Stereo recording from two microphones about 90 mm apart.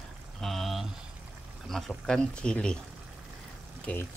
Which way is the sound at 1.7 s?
5° left (ahead or behind).